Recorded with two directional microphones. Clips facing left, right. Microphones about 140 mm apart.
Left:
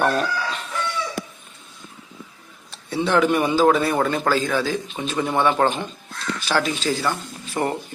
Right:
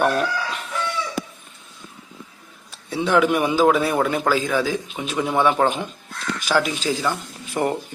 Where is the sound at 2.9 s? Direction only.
10° right (ahead or behind).